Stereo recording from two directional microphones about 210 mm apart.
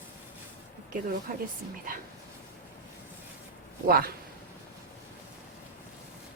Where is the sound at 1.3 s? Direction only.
45° right (ahead or behind).